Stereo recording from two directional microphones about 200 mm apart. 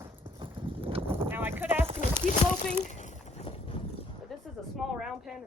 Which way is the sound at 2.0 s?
40° left (ahead or behind).